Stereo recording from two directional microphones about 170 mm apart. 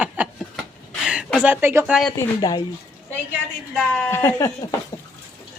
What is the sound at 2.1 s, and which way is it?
Speech, 20° left (ahead or behind).